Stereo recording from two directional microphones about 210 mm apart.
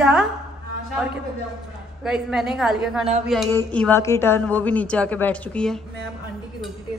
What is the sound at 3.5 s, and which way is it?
A woman's voice, 10° left (ahead or behind).